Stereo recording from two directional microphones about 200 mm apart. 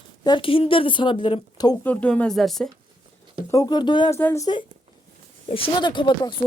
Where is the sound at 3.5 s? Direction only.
20° left (ahead or behind).